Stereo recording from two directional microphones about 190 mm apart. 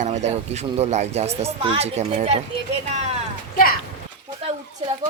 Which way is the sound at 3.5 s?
50° left (ahead or behind).